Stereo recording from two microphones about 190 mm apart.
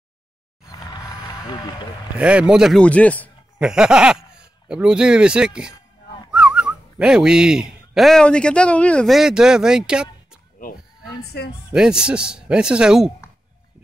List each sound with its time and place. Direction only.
2.1 s a man's voice: 5° right (ahead or behind)
3.5 s speech: 5° right (ahead or behind)
11.3 s a woman's voice: 60° left (ahead or behind)
11.7 s a man's voice: 5° right (ahead or behind)